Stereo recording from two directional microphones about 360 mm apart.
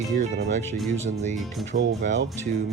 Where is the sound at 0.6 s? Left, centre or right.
Centre.